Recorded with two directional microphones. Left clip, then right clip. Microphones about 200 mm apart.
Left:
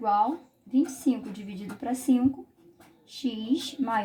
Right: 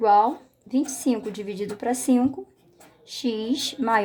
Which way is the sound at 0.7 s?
55° right (ahead or behind).